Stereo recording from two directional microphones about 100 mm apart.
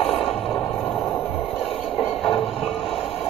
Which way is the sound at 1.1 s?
20° left (ahead or behind).